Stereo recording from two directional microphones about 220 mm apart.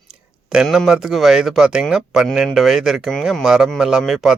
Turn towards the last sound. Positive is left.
turn(degrees=0)  # may be behind; listen again after turning